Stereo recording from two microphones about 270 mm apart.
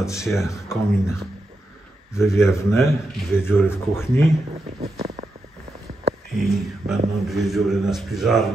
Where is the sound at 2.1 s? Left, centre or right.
Centre.